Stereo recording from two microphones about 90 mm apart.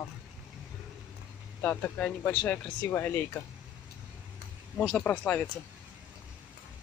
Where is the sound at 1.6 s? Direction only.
15° left (ahead or behind).